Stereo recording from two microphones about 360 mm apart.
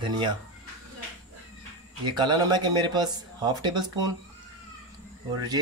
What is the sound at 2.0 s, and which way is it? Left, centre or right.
Speech, centre.